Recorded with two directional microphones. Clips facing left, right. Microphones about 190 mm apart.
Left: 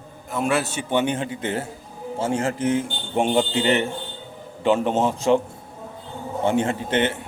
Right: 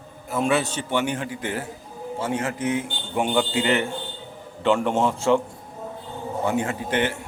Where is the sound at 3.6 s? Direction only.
20° left (ahead or behind).